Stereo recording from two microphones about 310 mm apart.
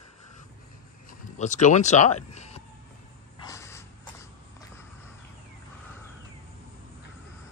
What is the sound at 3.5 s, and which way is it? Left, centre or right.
Snort, centre.